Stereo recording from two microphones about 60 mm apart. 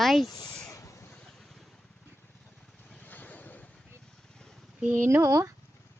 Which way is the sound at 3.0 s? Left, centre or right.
Left.